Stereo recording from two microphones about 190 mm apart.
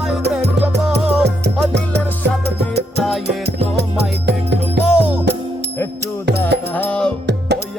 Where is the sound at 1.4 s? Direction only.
60° right (ahead or behind).